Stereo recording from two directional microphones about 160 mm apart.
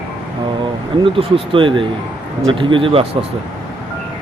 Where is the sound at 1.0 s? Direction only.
35° right (ahead or behind).